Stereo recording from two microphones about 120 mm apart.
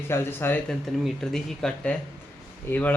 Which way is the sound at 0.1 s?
20° left (ahead or behind).